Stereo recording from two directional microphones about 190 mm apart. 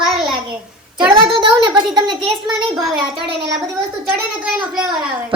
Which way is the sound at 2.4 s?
Centre (ahead or behind).